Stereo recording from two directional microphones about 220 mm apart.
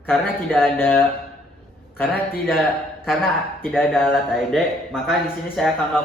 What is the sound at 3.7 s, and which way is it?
Speech, centre (ahead or behind).